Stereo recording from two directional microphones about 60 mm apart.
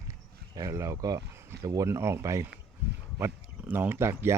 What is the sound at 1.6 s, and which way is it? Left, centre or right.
Speech, right.